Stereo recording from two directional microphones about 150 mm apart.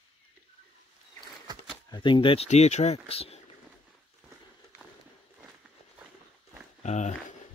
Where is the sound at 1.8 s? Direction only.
30° left (ahead or behind).